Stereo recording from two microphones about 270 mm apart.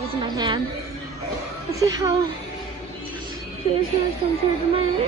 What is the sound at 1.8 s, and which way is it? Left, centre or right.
Speech, centre.